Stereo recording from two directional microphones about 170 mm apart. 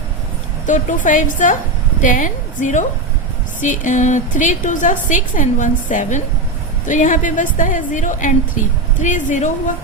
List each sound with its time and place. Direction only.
0.7 s a woman's voice: 50° left (ahead or behind)